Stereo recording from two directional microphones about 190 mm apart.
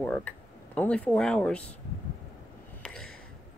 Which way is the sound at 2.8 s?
5° left (ahead or behind).